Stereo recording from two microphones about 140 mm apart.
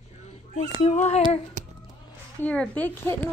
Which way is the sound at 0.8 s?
55° left (ahead or behind).